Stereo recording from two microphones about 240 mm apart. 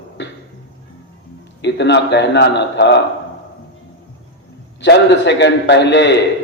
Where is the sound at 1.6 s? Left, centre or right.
Left.